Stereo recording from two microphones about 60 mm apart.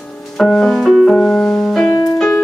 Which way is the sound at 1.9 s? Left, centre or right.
Left.